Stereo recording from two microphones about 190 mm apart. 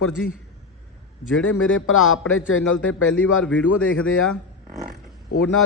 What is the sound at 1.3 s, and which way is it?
A man's voice, 90° left.